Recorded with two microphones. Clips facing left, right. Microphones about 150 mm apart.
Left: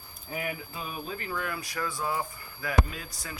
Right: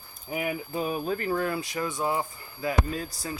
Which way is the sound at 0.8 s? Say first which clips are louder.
Right 9 dB; 40° right (ahead or behind).